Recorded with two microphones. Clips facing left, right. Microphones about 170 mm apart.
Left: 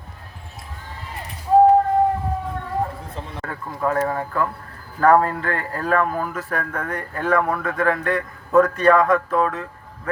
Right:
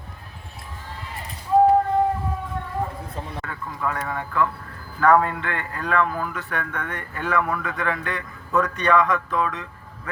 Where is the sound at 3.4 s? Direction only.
40° left (ahead or behind).